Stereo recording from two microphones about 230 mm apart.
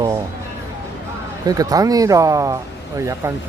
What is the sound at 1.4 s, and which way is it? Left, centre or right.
Speech, centre.